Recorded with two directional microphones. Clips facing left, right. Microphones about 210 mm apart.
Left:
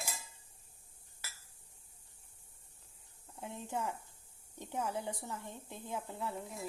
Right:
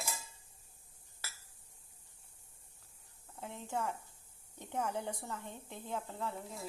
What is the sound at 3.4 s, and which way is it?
A woman's voice, 15° left (ahead or behind).